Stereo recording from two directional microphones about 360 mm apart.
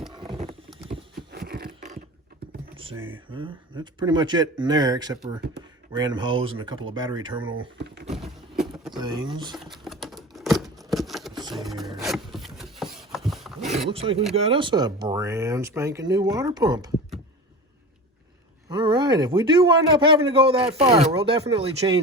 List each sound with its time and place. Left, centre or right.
0.1 s a sound: centre
3.1 s speech: centre
7.9 s vehicle: right
8.1 s a sound: centre
9.0 s speech: centre
9.6 s a sound: centre
11.5 s wood: centre
12.0 s rub: centre
13.9 s speech: centre
18.7 s speech: centre